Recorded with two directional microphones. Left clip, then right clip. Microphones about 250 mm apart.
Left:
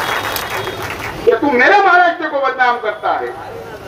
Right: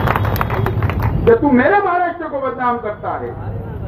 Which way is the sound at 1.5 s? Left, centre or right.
Left.